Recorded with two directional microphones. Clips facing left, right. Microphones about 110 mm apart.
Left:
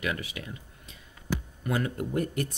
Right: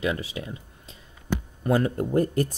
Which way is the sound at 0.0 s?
30° right (ahead or behind).